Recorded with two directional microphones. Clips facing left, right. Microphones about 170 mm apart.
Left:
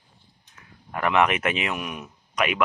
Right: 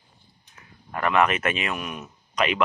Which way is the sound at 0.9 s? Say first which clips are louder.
Even; 10° left (ahead or behind).